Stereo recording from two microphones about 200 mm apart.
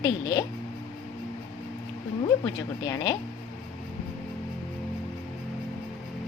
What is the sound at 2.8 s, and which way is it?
Speech, 20° left (ahead or behind).